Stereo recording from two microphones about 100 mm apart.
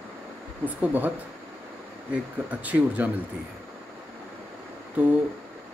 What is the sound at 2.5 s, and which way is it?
Speech, 15° right (ahead or behind).